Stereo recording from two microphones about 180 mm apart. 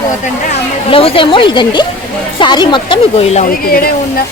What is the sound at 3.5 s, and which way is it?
Speech, 55° left (ahead or behind).